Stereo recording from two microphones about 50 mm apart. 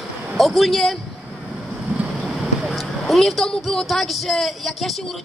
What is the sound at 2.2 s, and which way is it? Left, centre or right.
Speech, centre.